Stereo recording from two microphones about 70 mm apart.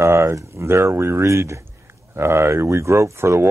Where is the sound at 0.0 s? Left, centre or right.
Right.